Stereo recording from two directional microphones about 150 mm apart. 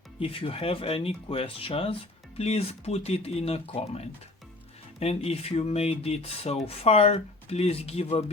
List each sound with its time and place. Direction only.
0.2 s speech: 40° left (ahead or behind)